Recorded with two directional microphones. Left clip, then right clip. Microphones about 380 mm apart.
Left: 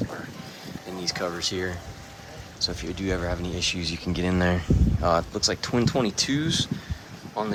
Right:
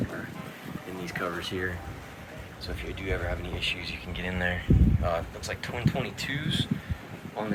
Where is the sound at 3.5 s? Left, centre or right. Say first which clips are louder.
Left 2 dB; centre.